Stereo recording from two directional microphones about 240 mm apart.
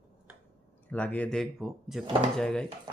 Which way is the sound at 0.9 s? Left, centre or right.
Centre.